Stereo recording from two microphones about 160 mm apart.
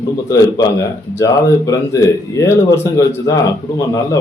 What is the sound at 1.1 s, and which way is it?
Speech, 20° left (ahead or behind).